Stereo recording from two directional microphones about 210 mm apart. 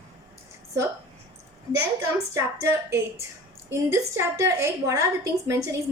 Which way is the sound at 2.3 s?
15° right (ahead or behind).